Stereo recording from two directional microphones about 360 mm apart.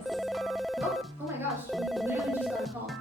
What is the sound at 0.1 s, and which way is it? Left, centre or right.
Telephone bell ringing, centre.